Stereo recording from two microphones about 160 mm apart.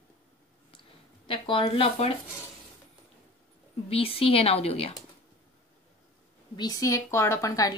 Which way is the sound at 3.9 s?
35° left (ahead or behind).